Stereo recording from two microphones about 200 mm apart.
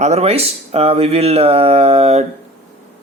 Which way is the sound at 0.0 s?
30° right (ahead or behind).